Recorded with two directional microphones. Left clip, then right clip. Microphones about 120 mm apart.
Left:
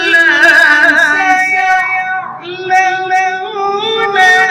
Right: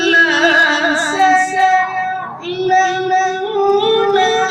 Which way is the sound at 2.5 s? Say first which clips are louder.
Left 3 dB; 35° right (ahead or behind).